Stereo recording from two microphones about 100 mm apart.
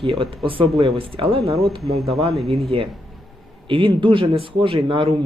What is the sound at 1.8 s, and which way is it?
Speech, 50° right (ahead or behind).